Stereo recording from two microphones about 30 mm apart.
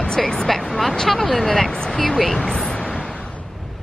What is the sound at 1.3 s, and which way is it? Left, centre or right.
Speech, centre.